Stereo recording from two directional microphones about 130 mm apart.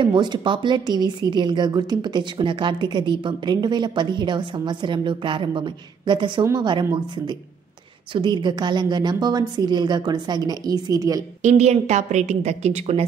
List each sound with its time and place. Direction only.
0.0 s a woman's voice: 35° right (ahead or behind)
11.4 s a woman's voice: 60° right (ahead or behind)